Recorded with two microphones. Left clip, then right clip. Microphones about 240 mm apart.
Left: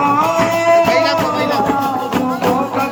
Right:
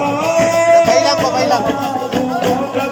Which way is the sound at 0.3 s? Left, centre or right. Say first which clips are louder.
Right 2 dB; centre.